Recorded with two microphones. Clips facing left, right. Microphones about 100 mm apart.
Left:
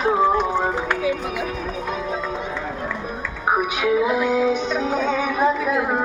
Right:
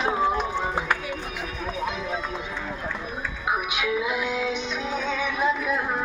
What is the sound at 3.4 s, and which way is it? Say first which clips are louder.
Music: left 7 dB; 35° left (ahead or behind).